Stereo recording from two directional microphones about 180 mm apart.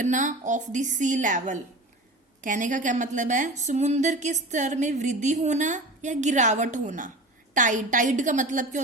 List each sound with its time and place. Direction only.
0.0 s a woman's voice: 45° right (ahead or behind)